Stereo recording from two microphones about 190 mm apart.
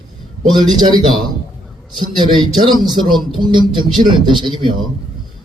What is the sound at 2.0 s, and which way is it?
A man's voice, 25° right (ahead or behind).